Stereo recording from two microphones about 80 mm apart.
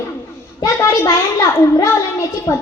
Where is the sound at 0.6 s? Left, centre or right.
Left.